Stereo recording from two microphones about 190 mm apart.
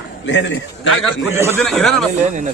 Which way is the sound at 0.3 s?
70° left (ahead or behind).